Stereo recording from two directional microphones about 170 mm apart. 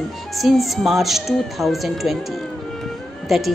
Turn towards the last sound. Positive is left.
turn(degrees=0)  # may be behind; listen again after turning